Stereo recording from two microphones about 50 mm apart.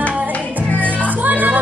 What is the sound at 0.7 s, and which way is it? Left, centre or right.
Music, right.